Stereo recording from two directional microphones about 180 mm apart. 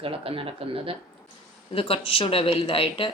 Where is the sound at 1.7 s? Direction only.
30° left (ahead or behind).